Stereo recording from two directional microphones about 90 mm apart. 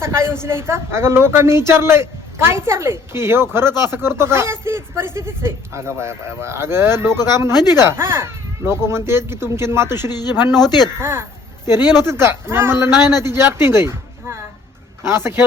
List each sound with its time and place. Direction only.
0.0 s a woman's voice: 30° right (ahead or behind)
10.5 s a man's voice: 50° left (ahead or behind)
11.0 s a woman's voice: 30° right (ahead or behind)